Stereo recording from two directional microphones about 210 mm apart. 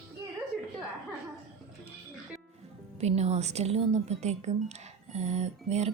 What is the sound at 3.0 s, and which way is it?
Speech, 30° right (ahead or behind).